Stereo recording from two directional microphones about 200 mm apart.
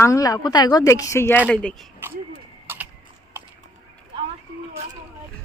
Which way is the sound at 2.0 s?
10° right (ahead or behind).